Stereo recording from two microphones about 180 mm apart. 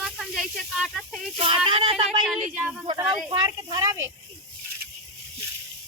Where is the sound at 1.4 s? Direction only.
30° right (ahead or behind).